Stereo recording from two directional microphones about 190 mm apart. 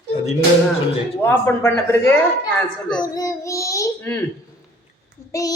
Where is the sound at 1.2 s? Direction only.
10° left (ahead or behind).